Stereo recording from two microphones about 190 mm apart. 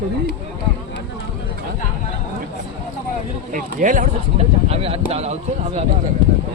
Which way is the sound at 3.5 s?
45° right (ahead or behind).